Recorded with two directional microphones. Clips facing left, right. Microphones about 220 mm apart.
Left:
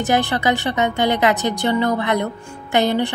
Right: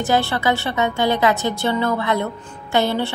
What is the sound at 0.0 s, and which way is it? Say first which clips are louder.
A woman's voice: left 1 dB; 15° left (ahead or behind).